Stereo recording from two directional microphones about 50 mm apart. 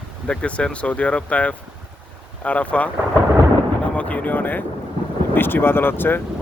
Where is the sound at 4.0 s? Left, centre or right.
Left.